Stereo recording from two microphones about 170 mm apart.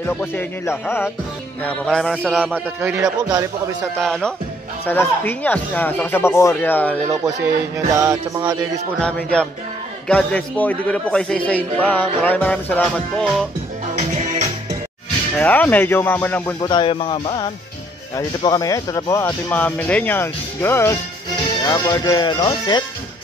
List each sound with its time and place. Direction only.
0.0 s a man's voice: 10° left (ahead or behind); by 3.0 s 10° right (ahead or behind)
3.0 s music: 20° right (ahead or behind)
4.0 s a man's voice: 5° left (ahead or behind)
7.7 s music: 15° right (ahead or behind)
9.0 s a man's voice: 5° left (ahead or behind)
13.9 s music: 45° right (ahead or behind)
15.3 s a man's voice: 10° left (ahead or behind)
16.6 s speech: 30° left (ahead or behind)
19.2 s a man's voice: 10° left (ahead or behind); by 22.8 s 25° left (ahead or behind)